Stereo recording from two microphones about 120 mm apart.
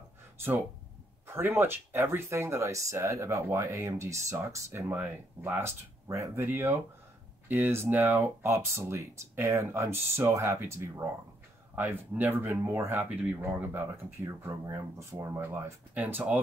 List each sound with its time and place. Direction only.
1.2 s speech: 20° right (ahead or behind)